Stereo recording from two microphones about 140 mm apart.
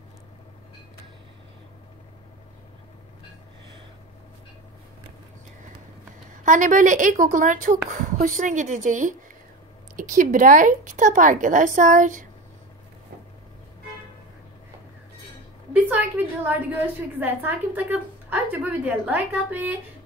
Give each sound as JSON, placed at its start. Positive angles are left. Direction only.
{"t": 6.4, "sound": "a woman's voice", "side_deg": -65}
{"t": 15.7, "sound": "a woman's voice", "side_deg": -10}